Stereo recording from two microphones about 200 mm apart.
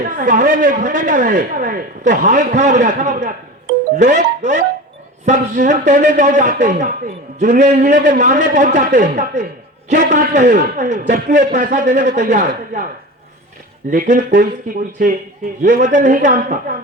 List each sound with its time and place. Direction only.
0.0 s speech: 40° right (ahead or behind)
13.9 s speech: 40° right (ahead or behind)